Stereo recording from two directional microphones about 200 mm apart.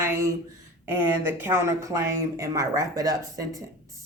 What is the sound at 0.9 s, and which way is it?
Speech, 10° right (ahead or behind).